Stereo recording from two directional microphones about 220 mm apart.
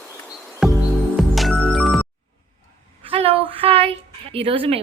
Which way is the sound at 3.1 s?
25° right (ahead or behind).